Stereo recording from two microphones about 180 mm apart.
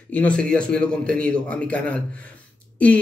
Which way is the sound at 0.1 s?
5° left (ahead or behind).